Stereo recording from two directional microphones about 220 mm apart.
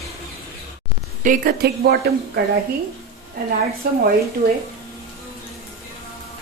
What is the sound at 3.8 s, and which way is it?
Speech, 45° right (ahead or behind).